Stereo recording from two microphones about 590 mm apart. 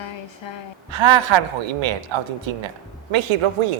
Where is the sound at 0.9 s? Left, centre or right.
Right.